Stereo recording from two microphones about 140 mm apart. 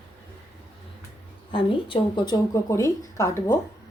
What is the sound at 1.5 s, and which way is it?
Speech, 40° left (ahead or behind).